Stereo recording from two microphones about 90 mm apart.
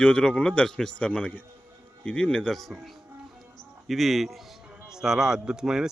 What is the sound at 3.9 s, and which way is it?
Speech, centre (ahead or behind).